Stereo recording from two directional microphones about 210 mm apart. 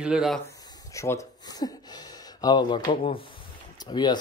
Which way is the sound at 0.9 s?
15° left (ahead or behind).